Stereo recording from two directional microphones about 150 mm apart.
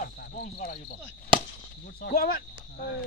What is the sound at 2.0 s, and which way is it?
Speech, 75° left (ahead or behind).